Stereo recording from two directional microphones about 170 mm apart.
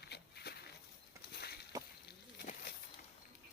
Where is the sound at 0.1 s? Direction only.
75° left (ahead or behind).